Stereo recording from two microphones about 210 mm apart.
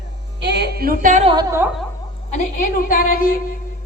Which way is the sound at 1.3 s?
15° right (ahead or behind).